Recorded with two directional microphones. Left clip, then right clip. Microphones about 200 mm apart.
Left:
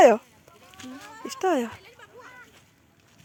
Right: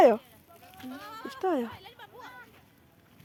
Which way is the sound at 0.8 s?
60° left (ahead or behind).